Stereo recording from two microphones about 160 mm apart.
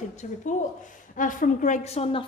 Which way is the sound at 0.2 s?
50° left (ahead or behind).